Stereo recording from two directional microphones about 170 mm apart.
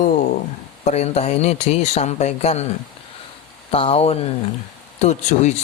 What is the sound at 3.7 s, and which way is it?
A man's voice, 35° left (ahead or behind).